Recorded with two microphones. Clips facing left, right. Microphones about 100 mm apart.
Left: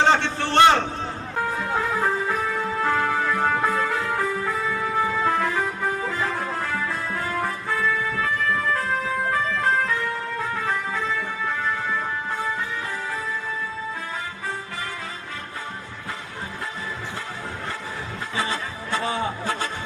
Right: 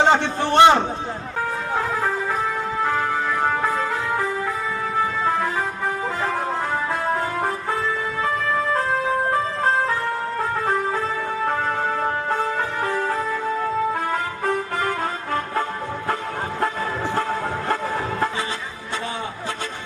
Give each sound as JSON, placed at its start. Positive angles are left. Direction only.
{"t": 0.0, "sound": "a sound", "side_deg": -15}
{"t": 2.8, "sound": "music", "side_deg": -15}
{"t": 7.7, "sound": "music", "side_deg": -25}